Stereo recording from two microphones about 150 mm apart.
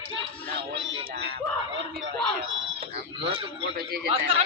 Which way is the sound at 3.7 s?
90° right.